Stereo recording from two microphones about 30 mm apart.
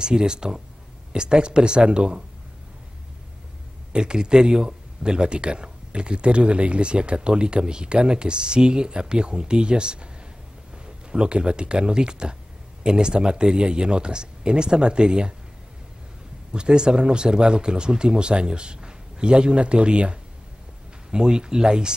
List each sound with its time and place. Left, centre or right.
0.0 s speech: right
3.9 s speech: right
11.1 s speech: right
16.5 s speech: right
21.1 s speech: right